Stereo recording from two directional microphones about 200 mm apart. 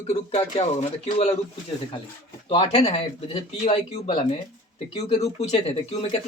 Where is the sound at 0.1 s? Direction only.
30° left (ahead or behind).